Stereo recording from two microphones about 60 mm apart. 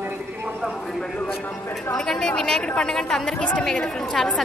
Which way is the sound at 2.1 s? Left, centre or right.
Centre.